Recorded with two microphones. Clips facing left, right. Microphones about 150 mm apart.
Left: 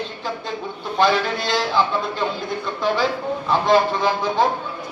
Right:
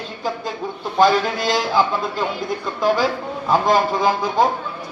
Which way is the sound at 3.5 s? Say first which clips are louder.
Right 1 dB; 45° right (ahead or behind).